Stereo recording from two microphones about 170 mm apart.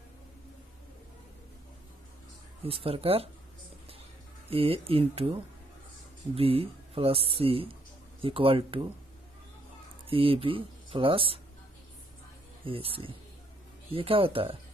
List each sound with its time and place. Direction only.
2.6 s speech: 35° right (ahead or behind)
4.5 s speech: 35° right (ahead or behind)
10.0 s speech: 30° right (ahead or behind)
12.6 s speech: 30° right (ahead or behind)